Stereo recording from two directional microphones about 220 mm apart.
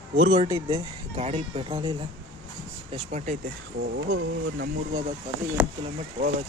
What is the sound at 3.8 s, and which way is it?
Speech, 50° right (ahead or behind).